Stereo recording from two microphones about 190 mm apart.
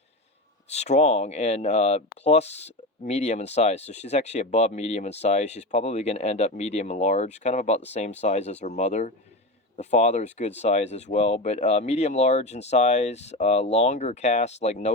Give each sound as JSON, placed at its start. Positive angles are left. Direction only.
{"t": 0.7, "sound": "speech", "side_deg": 35}